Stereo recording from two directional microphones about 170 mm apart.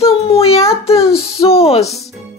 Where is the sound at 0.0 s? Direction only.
35° left (ahead or behind).